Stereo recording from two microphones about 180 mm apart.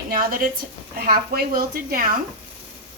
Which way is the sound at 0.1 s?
50° right (ahead or behind).